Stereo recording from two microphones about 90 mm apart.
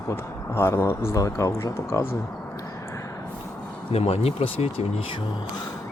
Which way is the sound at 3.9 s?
90° left.